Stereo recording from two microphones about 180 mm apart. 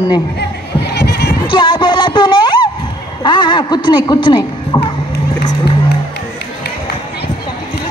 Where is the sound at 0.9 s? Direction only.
65° left (ahead or behind).